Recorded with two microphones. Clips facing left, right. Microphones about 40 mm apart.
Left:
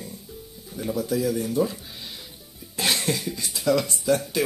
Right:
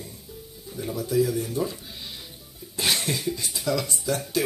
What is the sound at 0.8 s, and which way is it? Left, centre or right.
Speech, left.